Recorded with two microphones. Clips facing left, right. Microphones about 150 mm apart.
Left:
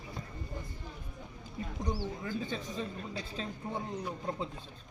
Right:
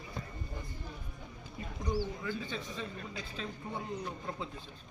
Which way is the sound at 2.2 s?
40° left (ahead or behind).